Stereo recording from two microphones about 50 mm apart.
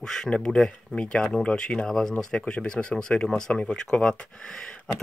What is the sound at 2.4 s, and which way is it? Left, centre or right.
Speech, centre.